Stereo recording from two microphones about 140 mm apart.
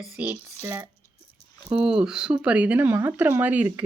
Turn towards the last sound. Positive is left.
turn(degrees=-10)  # may be behind; listen again after turning